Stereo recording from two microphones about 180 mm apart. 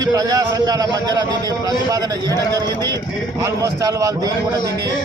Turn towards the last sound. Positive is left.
turn(degrees=-20)  # may be behind; listen again after turning